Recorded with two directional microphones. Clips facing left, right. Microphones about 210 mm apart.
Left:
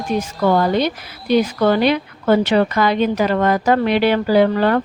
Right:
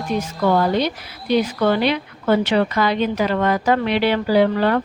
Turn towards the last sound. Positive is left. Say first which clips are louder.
# left 2 dB
turn(degrees=45)  # may be behind; listen again after turning